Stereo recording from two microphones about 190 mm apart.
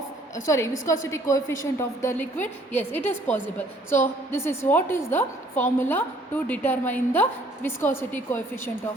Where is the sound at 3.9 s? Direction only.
15° left (ahead or behind).